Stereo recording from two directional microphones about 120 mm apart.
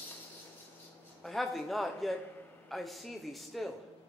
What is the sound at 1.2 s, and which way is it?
A man's voice, centre (ahead or behind).